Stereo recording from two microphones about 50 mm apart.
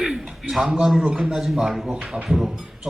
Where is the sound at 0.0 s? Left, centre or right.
Centre.